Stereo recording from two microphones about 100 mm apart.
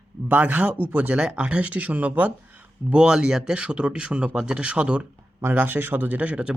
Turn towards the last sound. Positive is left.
turn(degrees=-10)  # may be behind; listen again after turning